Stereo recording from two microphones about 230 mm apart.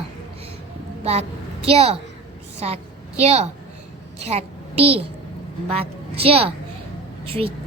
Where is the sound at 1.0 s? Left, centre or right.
Right.